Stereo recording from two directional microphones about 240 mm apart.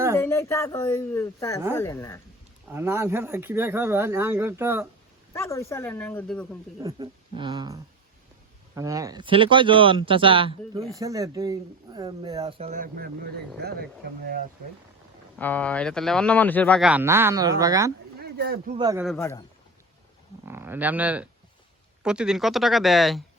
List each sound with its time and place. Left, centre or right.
0.2 s speech: centre
2.6 s speech: centre
5.3 s speech: centre
6.8 s speech: centre; by 13.8 s right
15.4 s speech: centre
18.2 s a sound: right
18.8 s speech: centre
19.0 s speech: centre
20.4 s speech: centre